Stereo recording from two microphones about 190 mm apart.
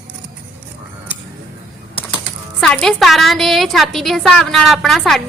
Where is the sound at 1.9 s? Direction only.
25° left (ahead or behind).